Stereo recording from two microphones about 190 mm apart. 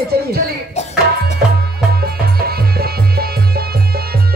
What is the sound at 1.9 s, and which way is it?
Music, 55° right (ahead or behind).